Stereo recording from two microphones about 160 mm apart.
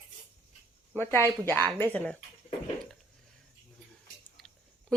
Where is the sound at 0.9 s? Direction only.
15° left (ahead or behind).